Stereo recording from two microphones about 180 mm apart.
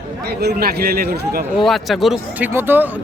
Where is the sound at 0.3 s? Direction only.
60° right (ahead or behind).